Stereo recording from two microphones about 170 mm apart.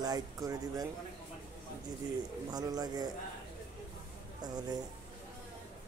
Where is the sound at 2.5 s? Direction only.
25° right (ahead or behind).